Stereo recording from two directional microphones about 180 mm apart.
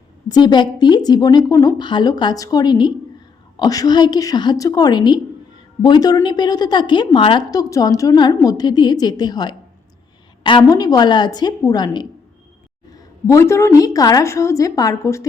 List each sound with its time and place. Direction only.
0.3 s a woman's voice: 25° left (ahead or behind)
13.2 s a woman's voice: 15° left (ahead or behind)